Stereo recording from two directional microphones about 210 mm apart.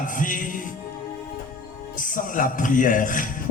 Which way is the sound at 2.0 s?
40° left (ahead or behind).